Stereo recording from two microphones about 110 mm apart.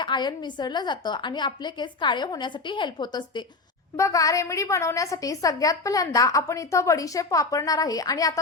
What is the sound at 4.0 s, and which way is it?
A woman's voice, 30° left (ahead or behind).